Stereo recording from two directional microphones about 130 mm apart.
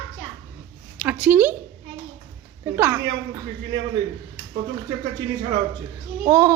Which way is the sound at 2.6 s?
20° right (ahead or behind).